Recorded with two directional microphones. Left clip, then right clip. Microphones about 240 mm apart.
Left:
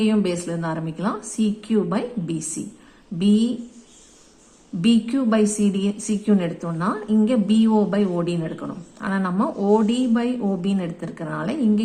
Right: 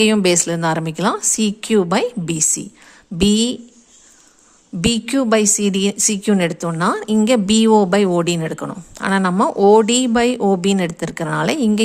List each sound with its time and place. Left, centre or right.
0.0 s a woman's voice: right
4.8 s a woman's voice: right